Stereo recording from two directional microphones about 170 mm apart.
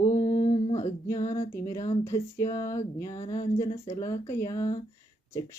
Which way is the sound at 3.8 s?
20° left (ahead or behind).